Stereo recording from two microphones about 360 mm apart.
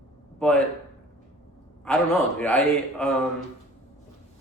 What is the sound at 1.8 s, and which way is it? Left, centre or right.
A man's voice, centre.